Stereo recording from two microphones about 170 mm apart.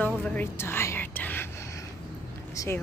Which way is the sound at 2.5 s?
20° left (ahead or behind).